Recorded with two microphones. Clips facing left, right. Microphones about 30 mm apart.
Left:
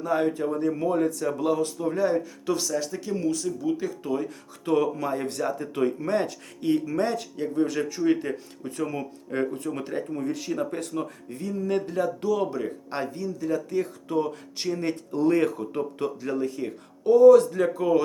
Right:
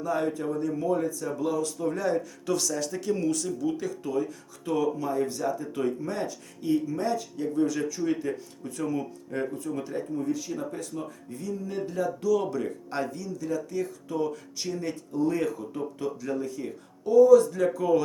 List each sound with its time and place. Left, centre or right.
0.0 s speech: left
1.8 s speech: centre
4.0 s speech: left
7.3 s speech: left
9.7 s speech: left
12.3 s speech: left
15.1 s speech: left
15.4 s speech: left